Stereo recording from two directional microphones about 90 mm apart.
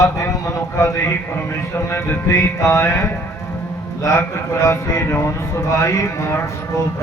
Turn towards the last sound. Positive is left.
turn(degrees=30)  # may be behind; listen again after turning